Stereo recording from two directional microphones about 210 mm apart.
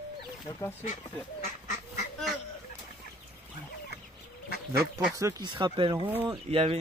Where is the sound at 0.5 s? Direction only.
15° left (ahead or behind).